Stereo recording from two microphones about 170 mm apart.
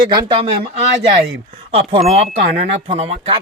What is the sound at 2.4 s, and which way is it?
Speech, 65° right (ahead or behind).